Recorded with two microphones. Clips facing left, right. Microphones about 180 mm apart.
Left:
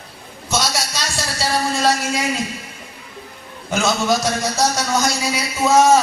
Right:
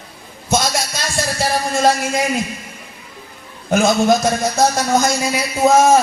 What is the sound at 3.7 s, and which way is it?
Music, 55° right (ahead or behind).